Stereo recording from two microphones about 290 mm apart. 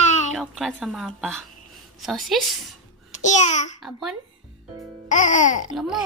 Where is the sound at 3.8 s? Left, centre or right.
Centre.